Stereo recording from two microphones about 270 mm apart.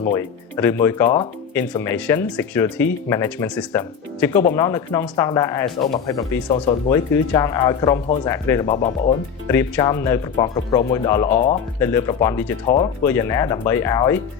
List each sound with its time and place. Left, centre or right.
0.1 s speech: centre